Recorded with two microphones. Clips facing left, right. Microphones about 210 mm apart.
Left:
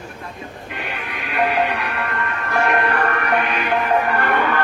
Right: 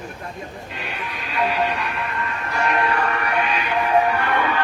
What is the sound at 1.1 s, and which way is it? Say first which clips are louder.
Music: left 3 dB; 60° left (ahead or behind).